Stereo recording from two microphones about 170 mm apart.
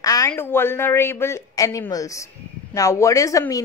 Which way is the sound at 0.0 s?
20° left (ahead or behind).